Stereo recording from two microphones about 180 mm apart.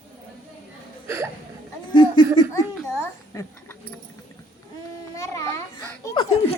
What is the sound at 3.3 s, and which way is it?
Speech, 20° left (ahead or behind).